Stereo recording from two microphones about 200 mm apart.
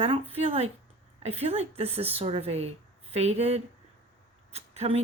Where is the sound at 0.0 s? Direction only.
30° right (ahead or behind).